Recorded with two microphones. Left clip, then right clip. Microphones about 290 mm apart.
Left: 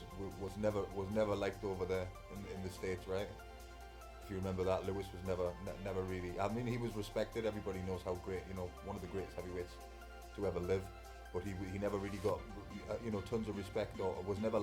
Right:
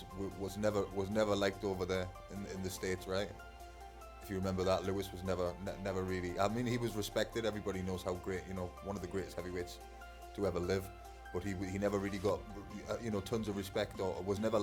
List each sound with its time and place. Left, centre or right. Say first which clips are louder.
0.4 s speech: right 3 dB; right
4.3 s speech: right 3 dB; right